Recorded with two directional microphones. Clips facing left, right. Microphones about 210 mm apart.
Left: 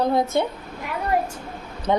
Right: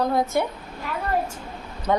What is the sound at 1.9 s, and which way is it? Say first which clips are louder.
Speech: left 1 dB; 20° left (ahead or behind).